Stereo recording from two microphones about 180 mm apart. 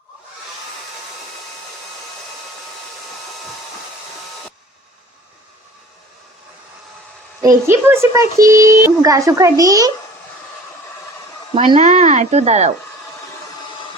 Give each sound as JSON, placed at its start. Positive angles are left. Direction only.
{"t": 7.4, "sound": "a child's voice", "side_deg": -15}
{"t": 11.5, "sound": "speech", "side_deg": -30}